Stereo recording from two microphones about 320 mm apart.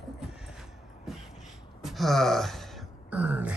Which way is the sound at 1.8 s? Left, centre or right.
Centre.